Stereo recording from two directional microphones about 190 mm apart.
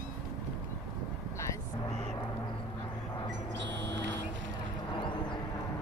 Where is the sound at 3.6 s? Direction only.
70° right (ahead or behind).